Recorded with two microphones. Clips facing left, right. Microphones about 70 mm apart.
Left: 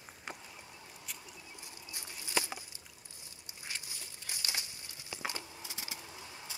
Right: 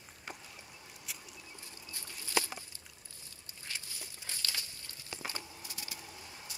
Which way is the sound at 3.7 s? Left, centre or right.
Centre.